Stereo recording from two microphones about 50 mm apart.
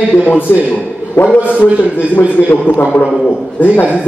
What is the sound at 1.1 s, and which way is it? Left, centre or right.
Speech, left.